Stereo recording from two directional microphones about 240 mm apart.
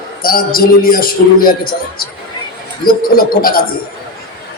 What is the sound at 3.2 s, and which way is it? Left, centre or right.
Speech, left.